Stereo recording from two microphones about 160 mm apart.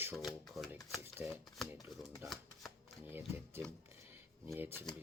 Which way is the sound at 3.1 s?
15° right (ahead or behind).